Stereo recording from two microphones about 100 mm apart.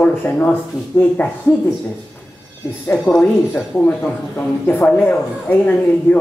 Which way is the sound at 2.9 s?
10° left (ahead or behind).